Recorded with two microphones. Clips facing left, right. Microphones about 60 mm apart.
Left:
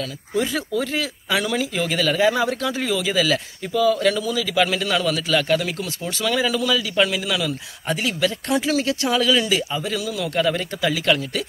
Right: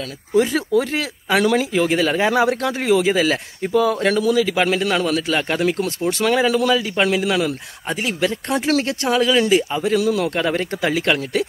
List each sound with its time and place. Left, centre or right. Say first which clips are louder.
0.4 s a man's voice: right 6 dB; right
8.6 s speech: right 4 dB; right
9.0 s a man's voice: right 3 dB; right